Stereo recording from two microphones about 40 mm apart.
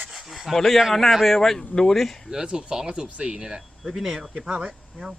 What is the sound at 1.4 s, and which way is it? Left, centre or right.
Speech, centre.